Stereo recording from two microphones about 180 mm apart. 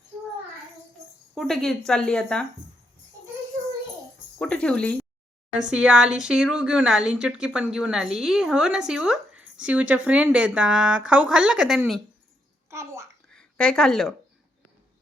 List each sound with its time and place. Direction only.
1.4 s speech: centre (ahead or behind)
4.4 s speech: 5° left (ahead or behind)
5.5 s speech: 5° right (ahead or behind)
12.7 s a child's voice: 15° right (ahead or behind)
13.3 s speech: 5° left (ahead or behind)